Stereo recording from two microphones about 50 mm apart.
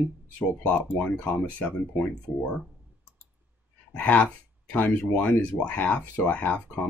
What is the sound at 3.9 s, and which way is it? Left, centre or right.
Speech, left.